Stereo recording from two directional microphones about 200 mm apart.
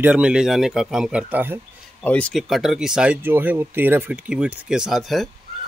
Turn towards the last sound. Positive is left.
turn(degrees=0)  # may be behind; listen again after turning